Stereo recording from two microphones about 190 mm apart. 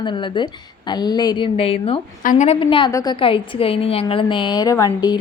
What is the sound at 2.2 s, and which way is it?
Speech, 40° left (ahead or behind).